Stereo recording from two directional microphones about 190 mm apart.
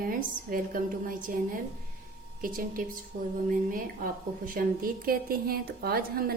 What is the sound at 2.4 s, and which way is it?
A woman's voice, 45° right (ahead or behind).